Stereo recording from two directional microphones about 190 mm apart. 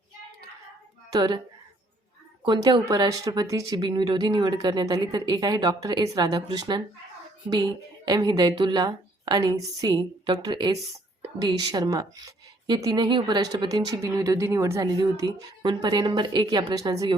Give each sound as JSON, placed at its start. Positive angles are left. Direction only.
{"t": 1.1, "sound": "speech", "side_deg": -20}
{"t": 2.4, "sound": "speech", "side_deg": -25}
{"t": 8.0, "sound": "speech", "side_deg": -20}